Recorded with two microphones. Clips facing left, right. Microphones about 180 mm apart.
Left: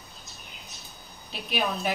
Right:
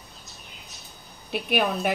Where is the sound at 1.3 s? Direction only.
60° right (ahead or behind).